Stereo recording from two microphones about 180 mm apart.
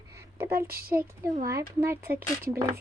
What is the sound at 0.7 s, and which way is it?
Speech, 55° right (ahead or behind).